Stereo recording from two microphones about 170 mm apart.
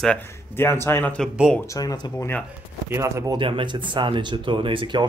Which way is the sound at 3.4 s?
30° right (ahead or behind).